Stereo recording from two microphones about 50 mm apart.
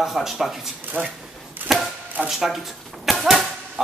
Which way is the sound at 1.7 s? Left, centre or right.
Centre.